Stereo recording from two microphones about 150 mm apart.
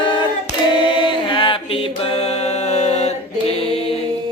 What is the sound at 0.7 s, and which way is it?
Mantra, 30° left (ahead or behind).